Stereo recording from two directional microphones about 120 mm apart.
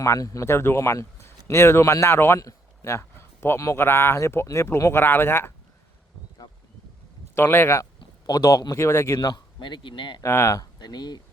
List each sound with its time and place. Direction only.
0.0 s speech: 25° left (ahead or behind)
7.3 s speech: 20° left (ahead or behind)
8.3 s speech: 30° left (ahead or behind)
9.1 s speech: 40° left (ahead or behind)
10.2 s speech: 20° left (ahead or behind)